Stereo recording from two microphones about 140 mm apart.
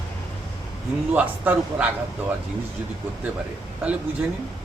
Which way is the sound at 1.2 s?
10° right (ahead or behind).